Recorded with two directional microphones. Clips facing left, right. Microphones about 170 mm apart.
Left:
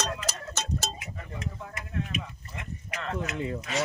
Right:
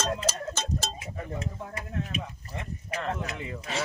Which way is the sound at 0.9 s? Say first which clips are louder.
Right 4 dB; 30° right (ahead or behind).